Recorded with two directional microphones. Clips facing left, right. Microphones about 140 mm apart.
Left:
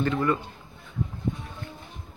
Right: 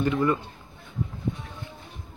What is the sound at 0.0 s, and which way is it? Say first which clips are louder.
Speech: right 1 dB; 20° right (ahead or behind).